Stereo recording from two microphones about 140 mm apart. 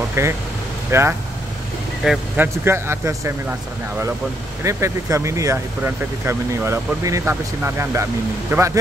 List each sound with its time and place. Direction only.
0.2 s speech: 20° right (ahead or behind)
4.6 s speech: 20° right (ahead or behind)